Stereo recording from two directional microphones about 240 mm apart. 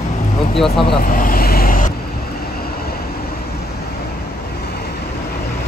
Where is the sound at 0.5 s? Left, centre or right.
Centre.